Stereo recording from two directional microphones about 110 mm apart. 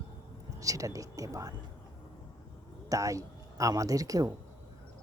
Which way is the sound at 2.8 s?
30° right (ahead or behind).